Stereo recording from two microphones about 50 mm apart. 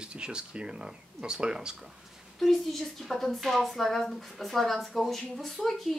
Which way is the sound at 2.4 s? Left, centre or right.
Centre.